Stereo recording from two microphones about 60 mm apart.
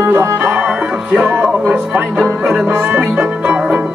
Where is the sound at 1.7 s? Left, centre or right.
Centre.